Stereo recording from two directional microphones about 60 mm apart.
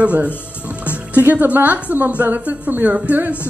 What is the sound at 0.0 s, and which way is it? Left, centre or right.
A woman's voice, right.